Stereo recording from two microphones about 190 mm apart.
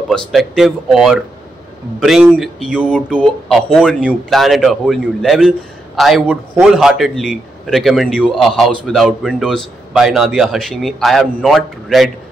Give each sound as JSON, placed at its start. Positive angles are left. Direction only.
{"t": 0.1, "sound": "a man's voice", "side_deg": 0}